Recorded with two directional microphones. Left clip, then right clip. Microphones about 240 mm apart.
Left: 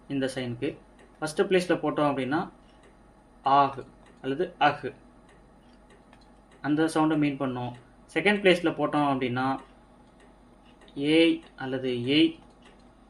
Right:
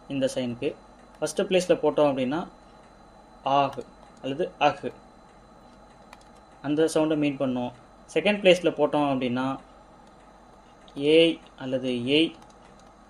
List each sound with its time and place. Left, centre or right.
0.1 s speech: right
3.4 s speech: right
6.6 s speech: right
10.9 s speech: right